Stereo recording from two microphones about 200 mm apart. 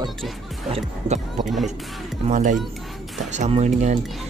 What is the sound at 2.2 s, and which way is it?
Speech, 40° right (ahead or behind).